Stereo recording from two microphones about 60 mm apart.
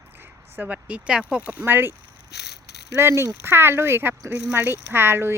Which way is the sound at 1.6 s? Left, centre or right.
Right.